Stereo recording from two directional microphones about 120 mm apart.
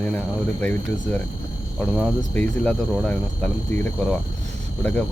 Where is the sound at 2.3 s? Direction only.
10° left (ahead or behind).